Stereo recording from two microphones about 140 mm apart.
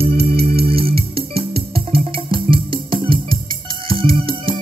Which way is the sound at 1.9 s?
40° right (ahead or behind).